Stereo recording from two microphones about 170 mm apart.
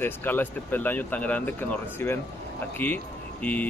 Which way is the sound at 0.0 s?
10° left (ahead or behind).